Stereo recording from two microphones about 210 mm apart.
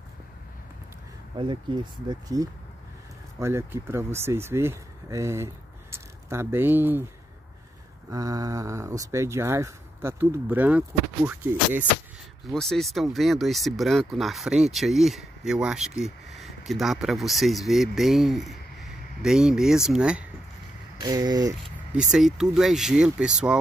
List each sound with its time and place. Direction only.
1.3 s speech: 20° right (ahead or behind)
8.1 s speech: 15° right (ahead or behind)
21.0 s speech: 20° right (ahead or behind)
21.6 s speech: centre (ahead or behind)